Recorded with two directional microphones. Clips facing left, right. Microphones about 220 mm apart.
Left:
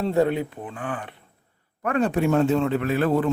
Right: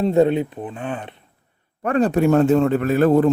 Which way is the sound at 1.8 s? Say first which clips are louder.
Right 5 dB; 35° right (ahead or behind).